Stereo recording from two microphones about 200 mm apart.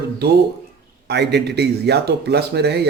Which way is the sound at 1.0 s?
55° right (ahead or behind).